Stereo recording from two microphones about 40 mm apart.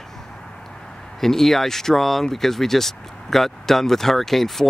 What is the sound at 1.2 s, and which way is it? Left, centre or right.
Speech, centre.